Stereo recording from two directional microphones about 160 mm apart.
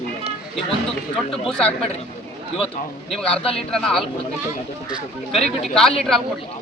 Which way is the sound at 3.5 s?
5° left (ahead or behind).